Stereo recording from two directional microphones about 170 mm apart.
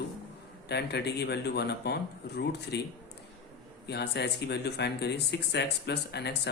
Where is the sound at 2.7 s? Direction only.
85° left.